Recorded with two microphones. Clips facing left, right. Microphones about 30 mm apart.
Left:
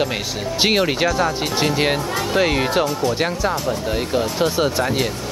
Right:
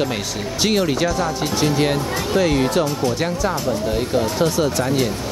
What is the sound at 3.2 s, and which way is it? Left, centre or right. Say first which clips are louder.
Speech: left 1 dB; left.